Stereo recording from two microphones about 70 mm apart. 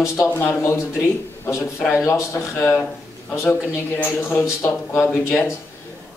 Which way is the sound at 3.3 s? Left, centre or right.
Left.